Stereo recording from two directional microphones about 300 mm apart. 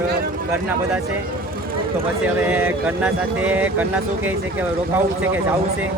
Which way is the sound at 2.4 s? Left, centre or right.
Centre.